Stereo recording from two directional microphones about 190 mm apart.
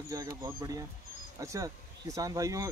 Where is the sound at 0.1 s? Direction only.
20° right (ahead or behind).